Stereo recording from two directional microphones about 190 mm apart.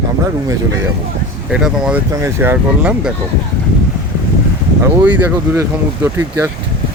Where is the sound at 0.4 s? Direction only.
15° right (ahead or behind).